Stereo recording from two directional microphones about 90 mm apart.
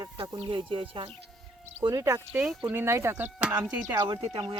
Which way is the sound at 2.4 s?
5° right (ahead or behind).